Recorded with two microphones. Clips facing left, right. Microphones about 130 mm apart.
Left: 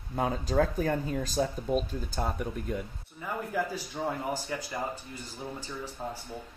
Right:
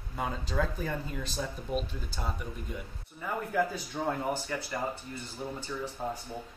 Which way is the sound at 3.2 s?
10° left (ahead or behind).